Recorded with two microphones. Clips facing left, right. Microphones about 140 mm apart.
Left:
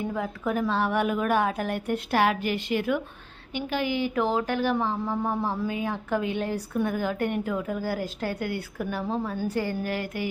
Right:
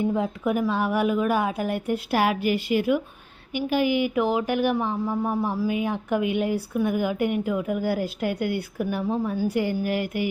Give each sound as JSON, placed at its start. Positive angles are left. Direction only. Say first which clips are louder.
{"t": 0.0, "sound": "speech", "louder": "right 5 dB", "side_deg": -20}
{"t": 5.6, "sound": "speech", "louder": "right 4 dB", "side_deg": -15}